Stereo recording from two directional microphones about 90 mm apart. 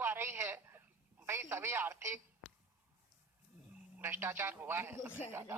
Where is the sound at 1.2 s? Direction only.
30° right (ahead or behind).